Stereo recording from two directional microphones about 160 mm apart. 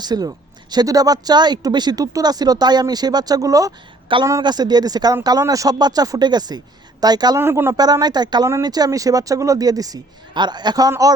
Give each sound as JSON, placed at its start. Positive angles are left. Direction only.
{"t": 0.0, "sound": "speech", "side_deg": -25}